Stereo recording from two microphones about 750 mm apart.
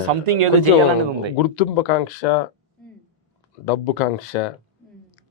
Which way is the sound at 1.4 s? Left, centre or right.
Left.